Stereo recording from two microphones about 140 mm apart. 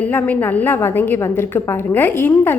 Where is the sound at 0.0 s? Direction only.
15° left (ahead or behind).